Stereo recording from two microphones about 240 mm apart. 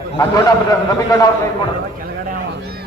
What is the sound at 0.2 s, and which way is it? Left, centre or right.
Speech, centre.